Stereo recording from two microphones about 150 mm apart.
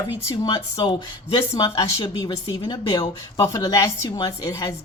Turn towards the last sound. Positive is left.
turn(degrees=25)  # may be behind; listen again after turning